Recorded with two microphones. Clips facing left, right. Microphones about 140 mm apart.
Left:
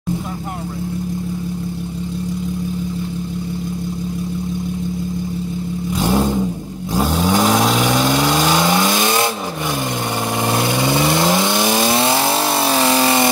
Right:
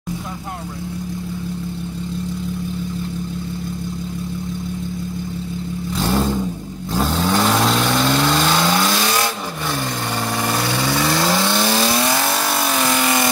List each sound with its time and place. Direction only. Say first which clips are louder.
5.9 s vehicle: left 2 dB; 10° left (ahead or behind)
10.8 s vehicle: left 2 dB; 20° left (ahead or behind)